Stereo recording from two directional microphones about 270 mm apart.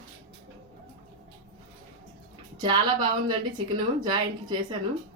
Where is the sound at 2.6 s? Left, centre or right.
Centre.